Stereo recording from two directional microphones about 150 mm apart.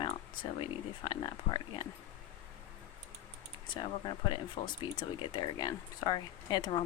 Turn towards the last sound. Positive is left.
turn(degrees=30)  # may be behind; listen again after turning